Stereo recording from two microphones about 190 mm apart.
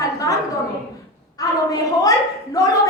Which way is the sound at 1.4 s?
20° left (ahead or behind).